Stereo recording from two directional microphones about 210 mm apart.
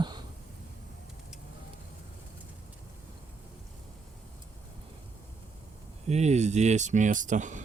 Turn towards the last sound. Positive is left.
turn(degrees=-35)  # may be behind; listen again after turning